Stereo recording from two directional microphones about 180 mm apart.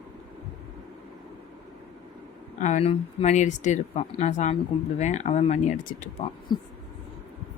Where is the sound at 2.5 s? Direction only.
40° left (ahead or behind).